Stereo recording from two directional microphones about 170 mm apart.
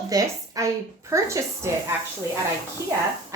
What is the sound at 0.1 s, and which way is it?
A woman's voice, 20° right (ahead or behind).